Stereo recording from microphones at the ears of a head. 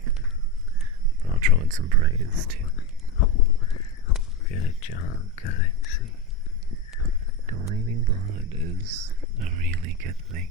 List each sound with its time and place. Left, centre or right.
1.2 s speech: right
2.7 s crow: left
7.0 s speech: right